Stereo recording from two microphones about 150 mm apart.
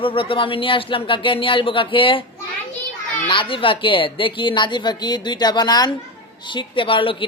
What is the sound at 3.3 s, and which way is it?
Speech, 35° left (ahead or behind).